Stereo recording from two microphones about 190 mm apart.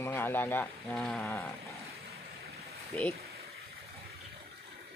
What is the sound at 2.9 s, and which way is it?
Speech, 10° left (ahead or behind).